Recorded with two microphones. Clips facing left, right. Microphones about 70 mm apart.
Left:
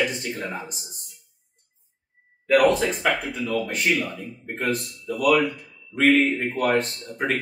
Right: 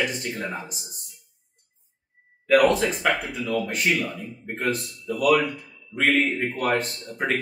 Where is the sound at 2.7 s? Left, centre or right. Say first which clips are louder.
Left 1 dB; centre.